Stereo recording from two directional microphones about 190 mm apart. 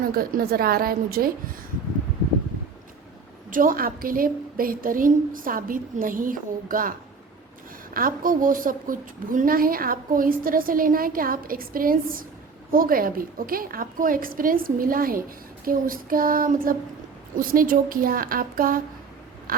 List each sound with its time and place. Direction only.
0.0 s a woman's voice: 50° right (ahead or behind)
3.5 s a woman's voice: 45° right (ahead or behind)
7.9 s a woman's voice: 45° right (ahead or behind)